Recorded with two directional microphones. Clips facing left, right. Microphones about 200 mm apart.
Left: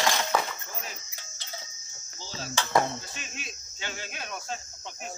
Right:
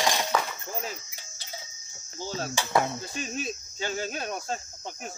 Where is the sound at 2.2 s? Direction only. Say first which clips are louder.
Right 7 dB; 55° right (ahead or behind).